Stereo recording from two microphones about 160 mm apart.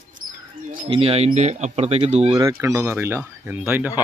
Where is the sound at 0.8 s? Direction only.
35° right (ahead or behind).